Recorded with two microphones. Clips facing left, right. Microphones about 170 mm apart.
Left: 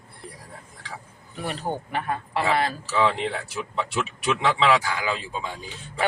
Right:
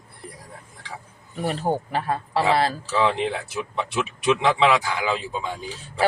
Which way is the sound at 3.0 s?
20° right (ahead or behind).